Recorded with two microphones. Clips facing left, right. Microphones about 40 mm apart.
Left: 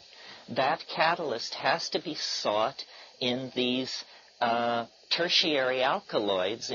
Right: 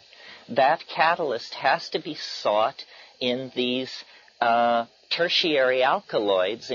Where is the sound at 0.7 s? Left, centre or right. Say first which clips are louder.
Right 5 dB; right.